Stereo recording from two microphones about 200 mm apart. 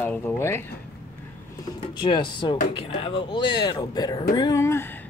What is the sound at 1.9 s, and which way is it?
Speech, 25° left (ahead or behind).